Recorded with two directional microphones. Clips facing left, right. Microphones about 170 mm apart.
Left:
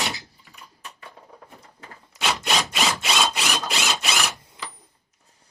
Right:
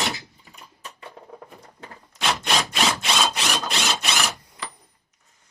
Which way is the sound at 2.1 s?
5° left (ahead or behind).